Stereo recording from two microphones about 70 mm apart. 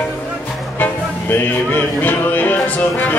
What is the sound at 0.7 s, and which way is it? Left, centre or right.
Music, left.